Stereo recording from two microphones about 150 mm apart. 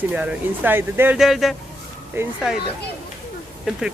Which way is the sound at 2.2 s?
15° right (ahead or behind).